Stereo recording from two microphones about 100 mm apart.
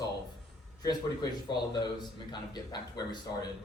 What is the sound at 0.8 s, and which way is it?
A man's voice, 40° left (ahead or behind).